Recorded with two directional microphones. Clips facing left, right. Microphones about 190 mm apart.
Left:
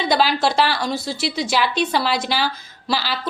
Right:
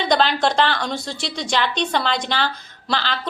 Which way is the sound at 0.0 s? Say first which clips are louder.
Even; 5° left (ahead or behind).